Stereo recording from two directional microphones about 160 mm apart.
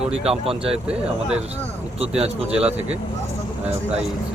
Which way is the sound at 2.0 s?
40° right (ahead or behind).